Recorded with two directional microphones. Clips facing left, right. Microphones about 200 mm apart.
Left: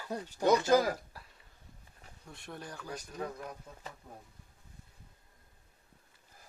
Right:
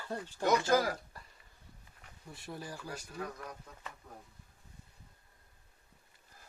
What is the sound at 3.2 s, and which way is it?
Speech, 25° left (ahead or behind).